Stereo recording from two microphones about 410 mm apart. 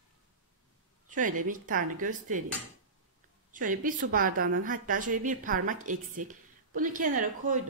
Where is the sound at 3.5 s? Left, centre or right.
Centre.